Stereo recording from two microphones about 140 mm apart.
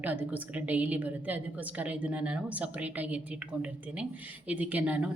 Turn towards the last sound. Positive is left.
turn(degrees=-10)  # may be behind; listen again after turning